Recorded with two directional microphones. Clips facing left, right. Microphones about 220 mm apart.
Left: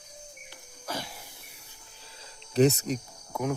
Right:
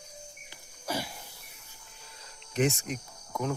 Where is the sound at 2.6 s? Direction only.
35° left (ahead or behind).